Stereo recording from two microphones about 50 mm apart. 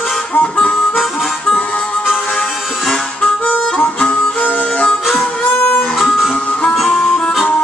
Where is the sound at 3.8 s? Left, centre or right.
Left.